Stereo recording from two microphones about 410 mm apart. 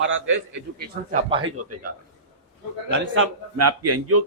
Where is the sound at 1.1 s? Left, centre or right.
Centre.